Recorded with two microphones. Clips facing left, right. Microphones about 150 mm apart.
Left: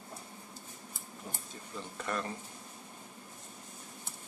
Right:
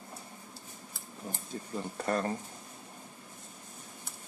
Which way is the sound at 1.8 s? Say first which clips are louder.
Right 5 dB; 40° right (ahead or behind).